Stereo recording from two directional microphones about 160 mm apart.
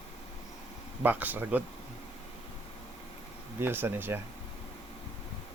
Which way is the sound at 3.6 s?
15° right (ahead or behind).